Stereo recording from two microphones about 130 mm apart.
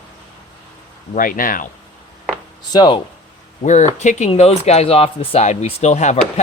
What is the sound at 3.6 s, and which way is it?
Speech, 65° left (ahead or behind).